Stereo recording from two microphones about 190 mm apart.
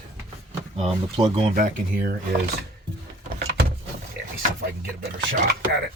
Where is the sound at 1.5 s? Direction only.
45° right (ahead or behind).